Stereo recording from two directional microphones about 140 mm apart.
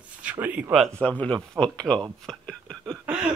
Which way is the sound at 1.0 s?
10° left (ahead or behind).